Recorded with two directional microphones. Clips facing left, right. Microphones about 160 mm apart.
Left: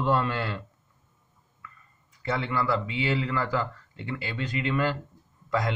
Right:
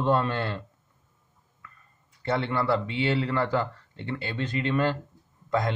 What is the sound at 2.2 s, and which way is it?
Speech, 35° right (ahead or behind).